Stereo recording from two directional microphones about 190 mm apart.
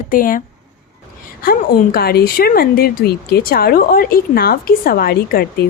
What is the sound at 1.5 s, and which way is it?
Speech, 50° left (ahead or behind).